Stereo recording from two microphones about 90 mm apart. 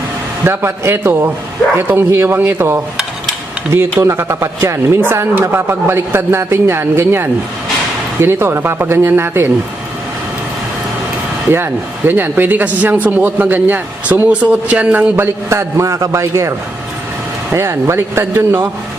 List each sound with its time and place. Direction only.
0.4 s speech: 25° right (ahead or behind)
4.0 s speech: 30° right (ahead or behind)
11.5 s speech: 25° right (ahead or behind)